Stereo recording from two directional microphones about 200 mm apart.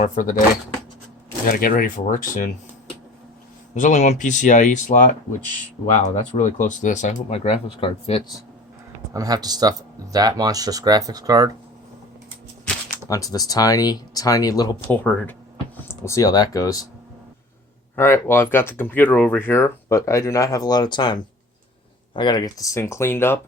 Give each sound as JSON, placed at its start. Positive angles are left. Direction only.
{"t": 0.0, "sound": "speech", "side_deg": 40}
{"t": 1.5, "sound": "speech", "side_deg": 45}
{"t": 3.8, "sound": "speech", "side_deg": 35}
{"t": 6.3, "sound": "speech", "side_deg": 40}
{"t": 9.1, "sound": "speech", "side_deg": -20}
{"t": 13.1, "sound": "speech", "side_deg": 15}
{"t": 15.0, "sound": "speech", "side_deg": 5}
{"t": 16.0, "sound": "speech", "side_deg": 15}
{"t": 17.9, "sound": "speech", "side_deg": 10}